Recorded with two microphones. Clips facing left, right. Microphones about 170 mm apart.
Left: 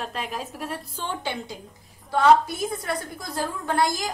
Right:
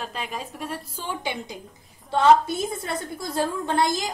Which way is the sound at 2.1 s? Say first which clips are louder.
Even; 25° right (ahead or behind).